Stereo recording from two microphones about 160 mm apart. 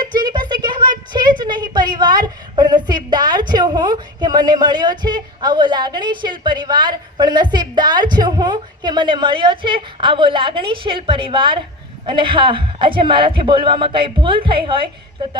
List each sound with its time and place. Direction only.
0.0 s a woman's voice: 30° right (ahead or behind)